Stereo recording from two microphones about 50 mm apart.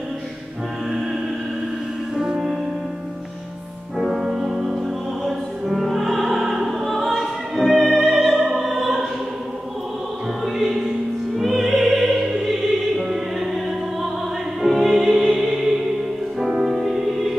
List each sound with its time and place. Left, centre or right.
2.1 s music: centre
4.0 s music: centre
4.3 s music: centre
5.2 s opera: centre
10.4 s music: centre
12.4 s choir: centre
14.6 s music: centre
16.7 s music: centre